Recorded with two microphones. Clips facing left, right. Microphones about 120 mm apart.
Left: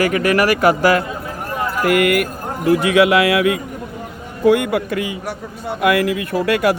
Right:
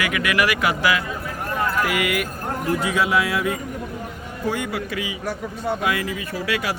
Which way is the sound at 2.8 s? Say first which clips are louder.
Left 8 dB; 70° left (ahead or behind).